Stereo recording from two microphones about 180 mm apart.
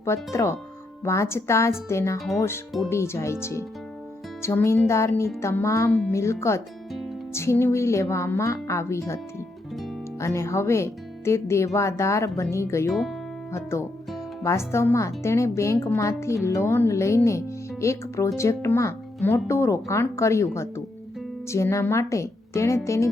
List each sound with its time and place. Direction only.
0.3 s a woman's voice: 15° left (ahead or behind)
12.9 s speech: centre (ahead or behind)
13.5 s a woman's voice: 15° left (ahead or behind)